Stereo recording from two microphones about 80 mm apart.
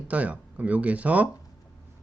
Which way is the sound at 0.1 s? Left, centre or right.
Centre.